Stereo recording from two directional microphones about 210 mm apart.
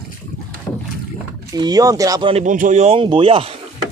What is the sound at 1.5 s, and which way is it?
Speech, 20° right (ahead or behind).